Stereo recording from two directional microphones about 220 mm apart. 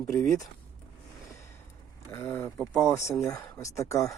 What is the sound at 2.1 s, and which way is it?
Speech, 10° left (ahead or behind).